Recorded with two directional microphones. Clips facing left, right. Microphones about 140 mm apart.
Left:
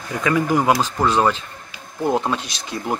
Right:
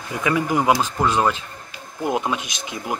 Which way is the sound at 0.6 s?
10° left (ahead or behind).